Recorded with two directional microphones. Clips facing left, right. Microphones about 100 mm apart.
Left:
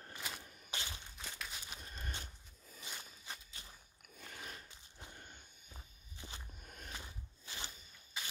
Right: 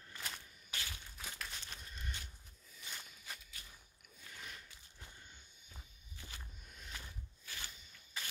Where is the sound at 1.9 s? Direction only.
40° left (ahead or behind).